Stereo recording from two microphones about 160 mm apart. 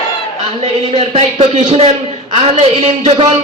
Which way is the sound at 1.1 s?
40° right (ahead or behind).